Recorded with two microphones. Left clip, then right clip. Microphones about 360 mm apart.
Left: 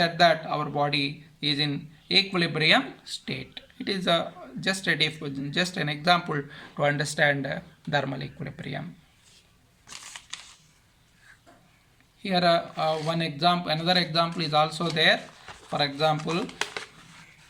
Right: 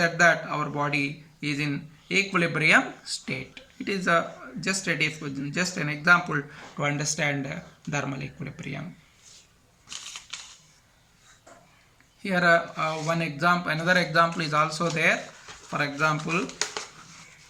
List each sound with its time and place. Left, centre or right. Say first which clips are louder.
0.0 s speech: even; centre
12.2 s speech: right 2 dB; centre